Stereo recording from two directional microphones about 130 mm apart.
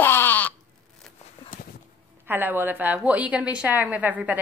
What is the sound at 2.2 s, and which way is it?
A woman's voice, 15° right (ahead or behind).